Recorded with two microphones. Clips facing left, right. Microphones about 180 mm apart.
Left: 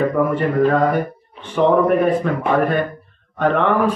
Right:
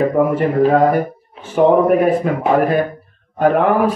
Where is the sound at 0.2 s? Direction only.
10° right (ahead or behind).